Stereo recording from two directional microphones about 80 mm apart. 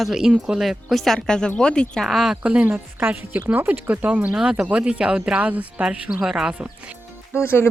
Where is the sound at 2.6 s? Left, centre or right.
Right; by 6.6 s centre.